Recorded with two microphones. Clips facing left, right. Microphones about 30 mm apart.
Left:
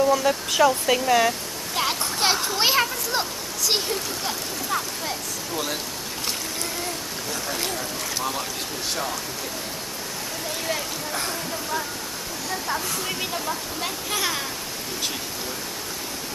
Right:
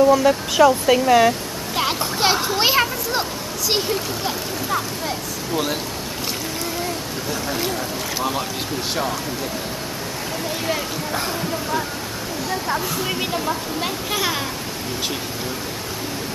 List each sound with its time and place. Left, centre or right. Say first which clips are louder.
0.0 s a child's voice: right 6 dB; centre
7.4 s speech: right 4 dB; centre
10.7 s speech: right 3 dB; centre
12.4 s speech: right 4 dB; centre